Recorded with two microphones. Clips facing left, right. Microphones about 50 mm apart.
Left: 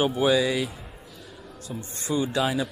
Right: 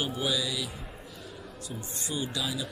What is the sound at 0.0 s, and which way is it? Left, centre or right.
Speech, left.